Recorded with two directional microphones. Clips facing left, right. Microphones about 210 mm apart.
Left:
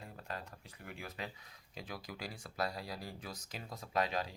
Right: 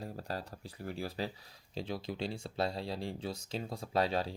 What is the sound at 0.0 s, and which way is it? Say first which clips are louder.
Speech: right 6 dB; 35° right (ahead or behind).